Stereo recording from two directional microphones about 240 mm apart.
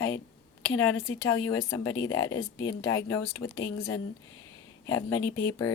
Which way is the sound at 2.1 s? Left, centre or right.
Left.